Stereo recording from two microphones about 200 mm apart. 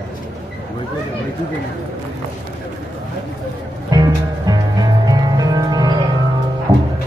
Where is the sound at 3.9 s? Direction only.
20° right (ahead or behind).